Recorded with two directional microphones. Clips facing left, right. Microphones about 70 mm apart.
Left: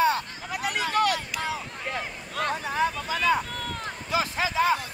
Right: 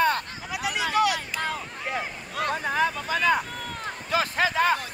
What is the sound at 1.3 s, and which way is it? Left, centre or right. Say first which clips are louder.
Vehicle: right 1 dB; right.